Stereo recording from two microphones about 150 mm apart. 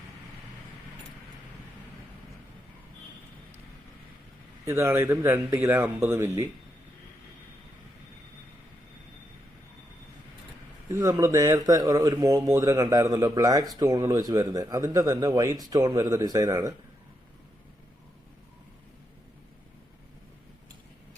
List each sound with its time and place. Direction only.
4.6 s speech: 15° right (ahead or behind)
10.8 s speech: 20° right (ahead or behind)